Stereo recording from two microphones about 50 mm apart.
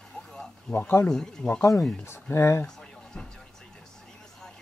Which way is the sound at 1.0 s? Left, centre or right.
Centre.